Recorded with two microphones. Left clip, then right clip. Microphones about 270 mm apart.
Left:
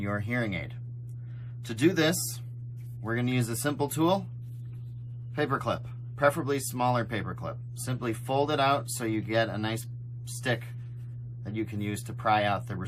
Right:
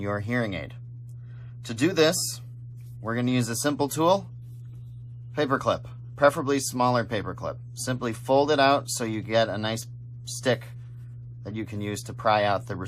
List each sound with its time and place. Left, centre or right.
0.0 s speech: right
5.3 s speech: centre